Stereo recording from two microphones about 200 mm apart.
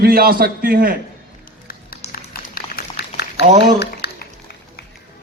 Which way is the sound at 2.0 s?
45° left (ahead or behind).